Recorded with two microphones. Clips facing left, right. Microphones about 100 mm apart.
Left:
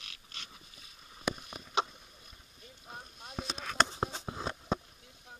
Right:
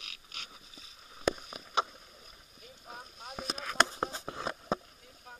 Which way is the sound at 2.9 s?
5° right (ahead or behind).